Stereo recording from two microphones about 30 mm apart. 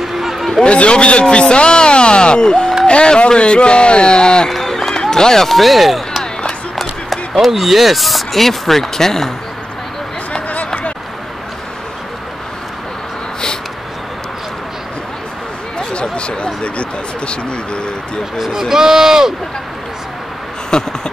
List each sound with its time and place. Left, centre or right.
0.2 s a sound: centre
0.7 s speech: left
4.5 s run: centre
5.0 s speech: centre
5.5 s speech: centre
6.4 s run: centre
7.4 s speech: centre
15.9 s a sound: left
18.4 s speech: centre
18.8 s speech: centre
20.7 s a sound: left